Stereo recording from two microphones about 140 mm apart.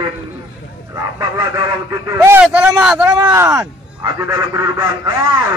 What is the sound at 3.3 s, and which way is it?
Speech, 20° right (ahead or behind).